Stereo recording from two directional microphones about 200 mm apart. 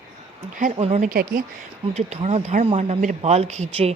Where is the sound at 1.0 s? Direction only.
45° right (ahead or behind).